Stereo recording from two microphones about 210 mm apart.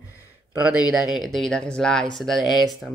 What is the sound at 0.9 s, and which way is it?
Speech, centre (ahead or behind).